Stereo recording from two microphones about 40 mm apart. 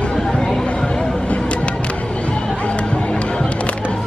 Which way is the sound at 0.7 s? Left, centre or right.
Left.